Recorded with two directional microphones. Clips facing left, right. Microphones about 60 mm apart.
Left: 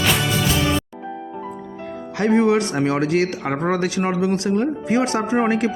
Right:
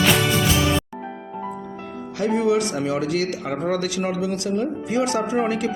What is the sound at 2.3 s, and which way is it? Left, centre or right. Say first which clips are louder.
Speech: left 3 dB; left.